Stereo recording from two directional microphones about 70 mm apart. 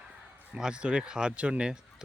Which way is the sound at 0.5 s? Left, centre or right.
Centre.